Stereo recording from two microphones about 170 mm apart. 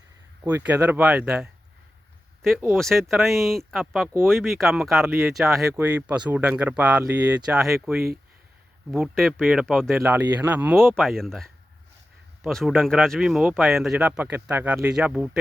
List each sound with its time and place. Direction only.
0.4 s speech: 10° right (ahead or behind)
2.7 s speech: centre (ahead or behind)
10.0 s speech: 10° right (ahead or behind)
10.8 s speech: 5° left (ahead or behind)